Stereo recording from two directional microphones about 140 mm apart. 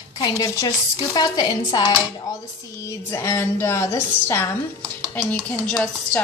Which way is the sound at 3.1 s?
20° left (ahead or behind).